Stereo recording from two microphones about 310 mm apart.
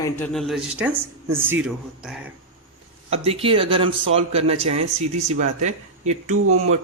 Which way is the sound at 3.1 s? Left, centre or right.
Centre.